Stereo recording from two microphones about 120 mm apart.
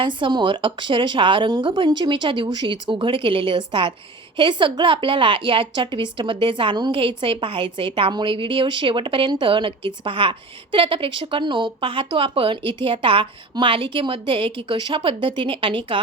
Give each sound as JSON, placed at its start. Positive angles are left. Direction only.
{"t": 0.0, "sound": "a woman's voice", "side_deg": -45}